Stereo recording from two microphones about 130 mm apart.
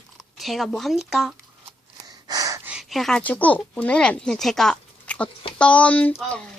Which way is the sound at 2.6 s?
5° right (ahead or behind).